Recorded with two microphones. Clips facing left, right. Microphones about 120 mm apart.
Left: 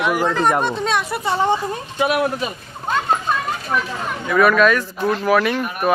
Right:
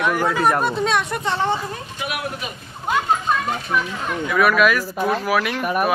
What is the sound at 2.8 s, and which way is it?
Children playing, 10° right (ahead or behind).